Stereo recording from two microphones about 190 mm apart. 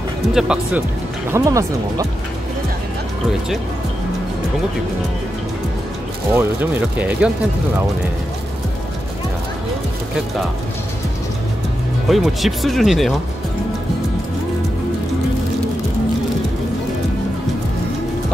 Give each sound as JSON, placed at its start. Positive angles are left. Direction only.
{"t": 0.3, "sound": "speech", "side_deg": -5}
{"t": 1.3, "sound": "speech", "side_deg": -15}
{"t": 6.3, "sound": "speech", "side_deg": -10}
{"t": 12.1, "sound": "speech", "side_deg": 0}